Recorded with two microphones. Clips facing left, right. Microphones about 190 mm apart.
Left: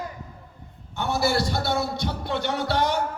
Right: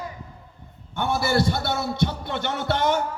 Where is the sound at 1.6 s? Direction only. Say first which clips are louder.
Right 1 dB; 55° right (ahead or behind).